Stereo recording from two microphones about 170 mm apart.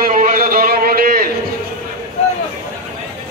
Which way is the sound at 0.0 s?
55° right (ahead or behind).